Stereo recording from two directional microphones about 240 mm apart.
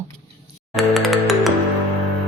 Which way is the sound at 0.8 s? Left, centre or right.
Centre.